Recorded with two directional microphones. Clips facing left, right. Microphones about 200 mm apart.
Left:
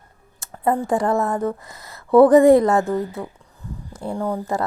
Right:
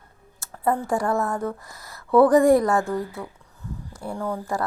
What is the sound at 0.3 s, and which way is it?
Speech, 20° left (ahead or behind).